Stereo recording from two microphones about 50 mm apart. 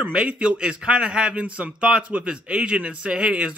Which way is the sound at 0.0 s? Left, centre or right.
Right.